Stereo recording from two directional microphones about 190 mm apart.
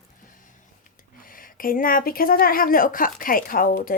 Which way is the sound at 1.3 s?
45° left (ahead or behind).